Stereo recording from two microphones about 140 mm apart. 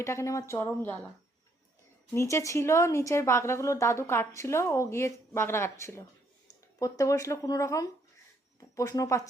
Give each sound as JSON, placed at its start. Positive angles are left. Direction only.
{"t": 0.0, "sound": "a woman's voice", "side_deg": 20}
{"t": 2.1, "sound": "a woman's voice", "side_deg": 20}